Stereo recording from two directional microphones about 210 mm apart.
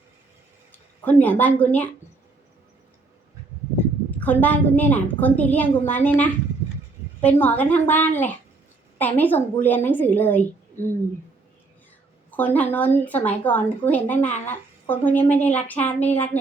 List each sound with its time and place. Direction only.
0.7 s speech: 10° left (ahead or behind)
4.2 s a woman's voice: 10° left (ahead or behind)
12.3 s a woman's voice: 10° left (ahead or behind)